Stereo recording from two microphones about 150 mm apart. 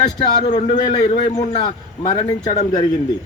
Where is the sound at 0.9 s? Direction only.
45° left (ahead or behind).